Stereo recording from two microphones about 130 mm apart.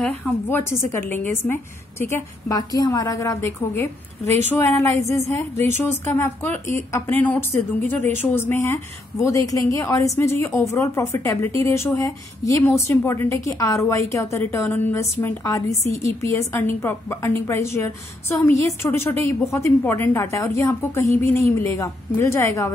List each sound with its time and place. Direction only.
0.0 s a woman's voice: 15° left (ahead or behind)
15.8 s a woman's voice: 60° left (ahead or behind)
16.2 s a woman's voice: 20° left (ahead or behind)